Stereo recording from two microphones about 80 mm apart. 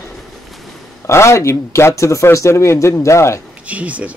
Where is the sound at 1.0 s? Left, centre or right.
Left.